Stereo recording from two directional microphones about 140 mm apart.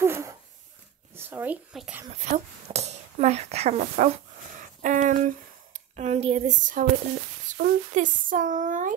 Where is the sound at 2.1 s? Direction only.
55° right (ahead or behind).